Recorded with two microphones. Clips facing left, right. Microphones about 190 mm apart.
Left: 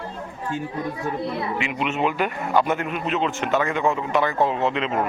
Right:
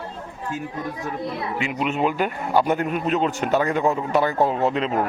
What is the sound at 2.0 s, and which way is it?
A man's voice, 40° right (ahead or behind).